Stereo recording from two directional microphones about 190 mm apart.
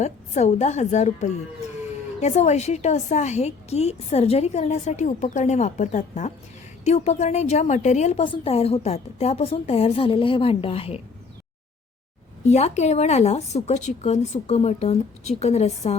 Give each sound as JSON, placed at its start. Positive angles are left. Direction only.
{"t": 0.0, "sound": "a woman's voice", "side_deg": 35}
{"t": 12.5, "sound": "a woman's voice", "side_deg": 35}